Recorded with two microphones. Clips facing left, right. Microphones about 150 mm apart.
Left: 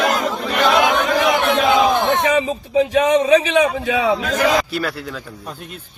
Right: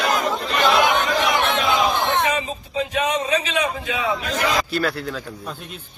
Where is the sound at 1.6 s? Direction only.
60° left (ahead or behind).